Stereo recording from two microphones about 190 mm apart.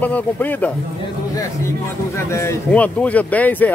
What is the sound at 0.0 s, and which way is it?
Speech, 10° left (ahead or behind).